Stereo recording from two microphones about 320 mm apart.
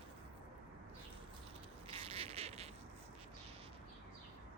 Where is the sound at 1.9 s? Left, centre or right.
Centre.